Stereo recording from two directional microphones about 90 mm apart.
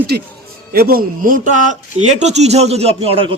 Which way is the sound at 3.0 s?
90° right.